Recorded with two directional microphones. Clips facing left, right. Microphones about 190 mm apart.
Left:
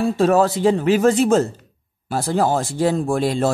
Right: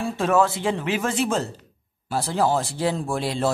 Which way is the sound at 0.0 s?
40° left (ahead or behind).